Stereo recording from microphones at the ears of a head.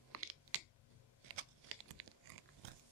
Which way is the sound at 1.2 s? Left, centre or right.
Right.